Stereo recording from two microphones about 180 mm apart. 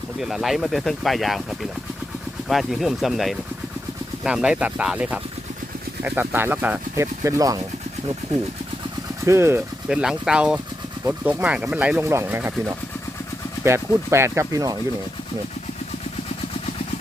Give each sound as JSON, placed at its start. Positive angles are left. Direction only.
{"t": 0.2, "sound": "speech", "side_deg": 0}
{"t": 2.5, "sound": "speech", "side_deg": 0}
{"t": 9.2, "sound": "speech", "side_deg": -15}